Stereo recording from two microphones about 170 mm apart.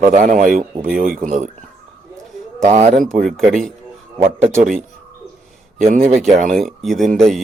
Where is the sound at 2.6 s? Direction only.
40° right (ahead or behind).